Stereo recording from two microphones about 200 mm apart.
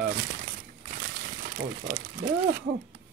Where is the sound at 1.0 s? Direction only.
45° right (ahead or behind).